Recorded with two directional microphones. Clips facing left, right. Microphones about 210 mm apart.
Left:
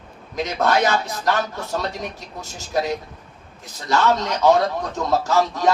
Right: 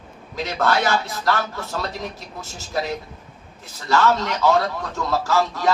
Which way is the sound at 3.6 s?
20° left (ahead or behind).